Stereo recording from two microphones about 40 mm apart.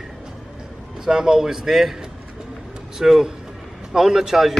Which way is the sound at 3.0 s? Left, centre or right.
Centre.